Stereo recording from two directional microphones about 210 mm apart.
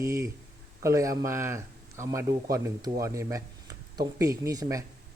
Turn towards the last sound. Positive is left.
turn(degrees=-15)  # may be behind; listen again after turning